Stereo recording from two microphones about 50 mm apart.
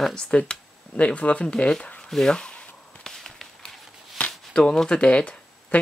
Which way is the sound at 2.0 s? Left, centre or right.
Centre.